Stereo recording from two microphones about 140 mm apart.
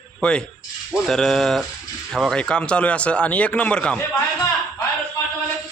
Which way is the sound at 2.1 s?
5° left (ahead or behind).